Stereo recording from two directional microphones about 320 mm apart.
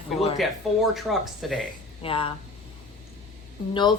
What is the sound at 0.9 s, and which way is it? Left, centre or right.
Speech, centre.